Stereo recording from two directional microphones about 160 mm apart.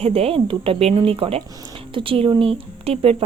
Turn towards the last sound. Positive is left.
turn(degrees=-40)  # may be behind; listen again after turning